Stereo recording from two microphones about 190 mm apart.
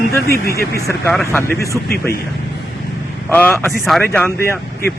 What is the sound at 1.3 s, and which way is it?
Speech, 10° left (ahead or behind).